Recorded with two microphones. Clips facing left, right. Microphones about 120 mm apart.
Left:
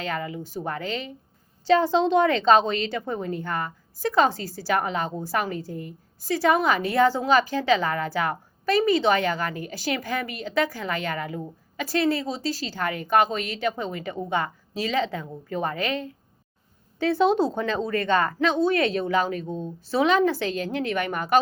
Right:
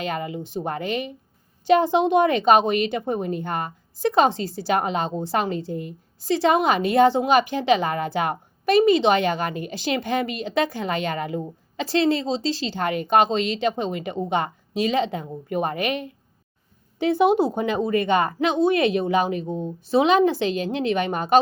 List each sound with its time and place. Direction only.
0.0 s a woman's voice: 20° right (ahead or behind)